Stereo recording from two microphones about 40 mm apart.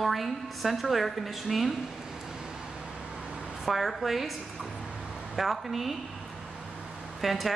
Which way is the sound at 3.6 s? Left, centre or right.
Centre.